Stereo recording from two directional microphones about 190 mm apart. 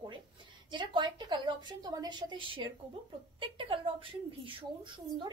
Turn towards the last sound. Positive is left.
turn(degrees=-25)  # may be behind; listen again after turning